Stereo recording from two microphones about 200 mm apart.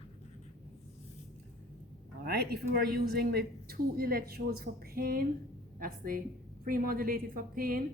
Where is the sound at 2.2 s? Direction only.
55° right (ahead or behind).